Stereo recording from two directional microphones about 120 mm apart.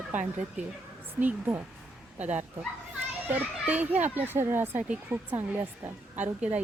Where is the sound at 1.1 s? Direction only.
15° right (ahead or behind).